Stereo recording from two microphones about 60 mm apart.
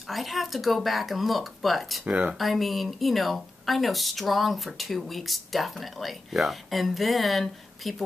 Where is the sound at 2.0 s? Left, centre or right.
Right.